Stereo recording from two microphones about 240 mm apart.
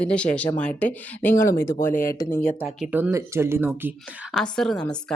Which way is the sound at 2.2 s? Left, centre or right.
Centre.